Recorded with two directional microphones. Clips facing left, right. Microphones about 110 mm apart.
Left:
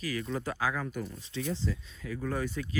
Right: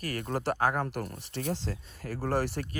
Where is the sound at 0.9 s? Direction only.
85° right.